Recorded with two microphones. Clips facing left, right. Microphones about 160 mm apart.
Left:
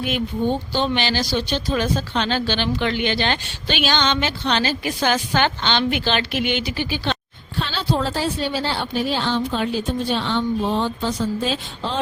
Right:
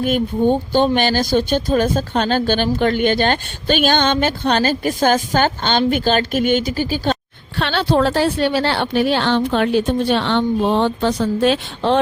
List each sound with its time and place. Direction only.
0.0 s speech: 50° right (ahead or behind)
7.6 s speech: 65° right (ahead or behind)